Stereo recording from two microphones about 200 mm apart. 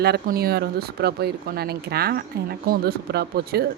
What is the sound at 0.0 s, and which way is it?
Speech, 50° right (ahead or behind).